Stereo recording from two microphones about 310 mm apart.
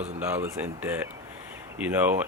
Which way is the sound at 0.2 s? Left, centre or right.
Centre.